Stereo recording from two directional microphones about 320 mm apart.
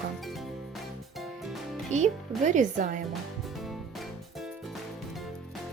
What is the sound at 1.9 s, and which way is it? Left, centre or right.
Speech, right.